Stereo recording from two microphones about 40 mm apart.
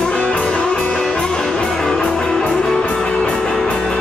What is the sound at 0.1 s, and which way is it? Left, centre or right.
Music, left.